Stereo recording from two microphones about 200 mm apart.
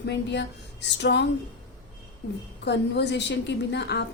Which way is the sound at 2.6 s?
60° left (ahead or behind).